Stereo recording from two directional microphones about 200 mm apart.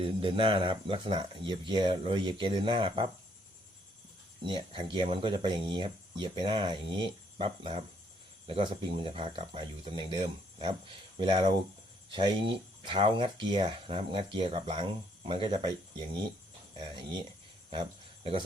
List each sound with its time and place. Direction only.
0.0 s speech: 25° right (ahead or behind)
4.4 s speech: 25° right (ahead or behind)
17.7 s cricket: 25° right (ahead or behind)